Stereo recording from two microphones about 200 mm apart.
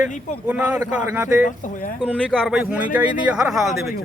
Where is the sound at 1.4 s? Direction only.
40° left (ahead or behind).